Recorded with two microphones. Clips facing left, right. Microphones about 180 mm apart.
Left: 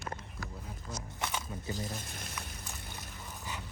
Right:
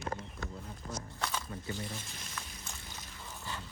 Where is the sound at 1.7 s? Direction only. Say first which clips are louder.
Left 3 dB; 40° left (ahead or behind).